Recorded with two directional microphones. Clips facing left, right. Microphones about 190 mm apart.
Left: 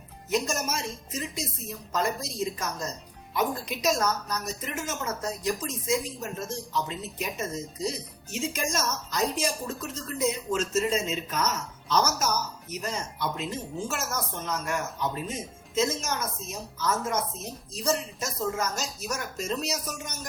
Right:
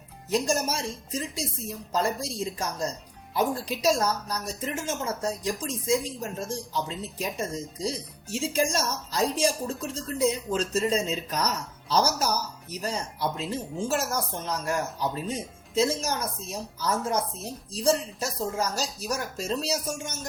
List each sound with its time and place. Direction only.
0.3 s a woman's voice: 30° right (ahead or behind)